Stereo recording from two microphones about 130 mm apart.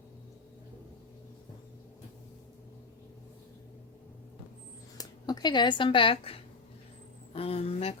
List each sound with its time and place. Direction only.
4.9 s a woman's voice: 30° left (ahead or behind); by 7.9 s 50° left (ahead or behind)